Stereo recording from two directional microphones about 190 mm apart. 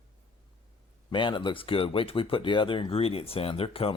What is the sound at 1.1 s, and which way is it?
Speech, 25° left (ahead or behind).